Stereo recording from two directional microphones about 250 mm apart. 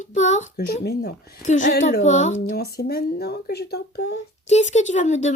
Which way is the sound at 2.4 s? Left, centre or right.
Left.